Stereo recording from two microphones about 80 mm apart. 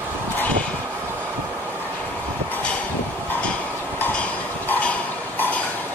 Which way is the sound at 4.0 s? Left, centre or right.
Left.